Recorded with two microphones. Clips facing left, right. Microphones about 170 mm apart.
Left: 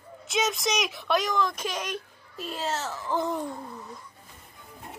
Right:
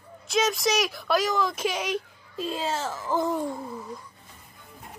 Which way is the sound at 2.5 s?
10° right (ahead or behind).